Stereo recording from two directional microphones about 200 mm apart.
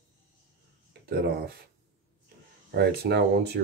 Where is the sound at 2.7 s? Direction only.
55° right (ahead or behind).